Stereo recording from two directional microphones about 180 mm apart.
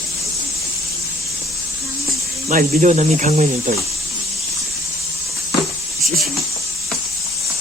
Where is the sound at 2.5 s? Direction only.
45° right (ahead or behind).